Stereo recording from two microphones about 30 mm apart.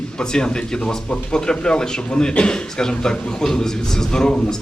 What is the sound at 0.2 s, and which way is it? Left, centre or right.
A man's voice, left.